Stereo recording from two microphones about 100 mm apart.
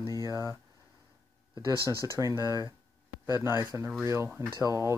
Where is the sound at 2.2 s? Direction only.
30° right (ahead or behind).